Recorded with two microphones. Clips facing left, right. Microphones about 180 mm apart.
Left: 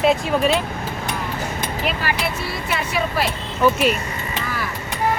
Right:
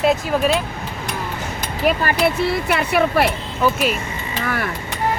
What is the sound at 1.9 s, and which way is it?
Speech, 55° right (ahead or behind).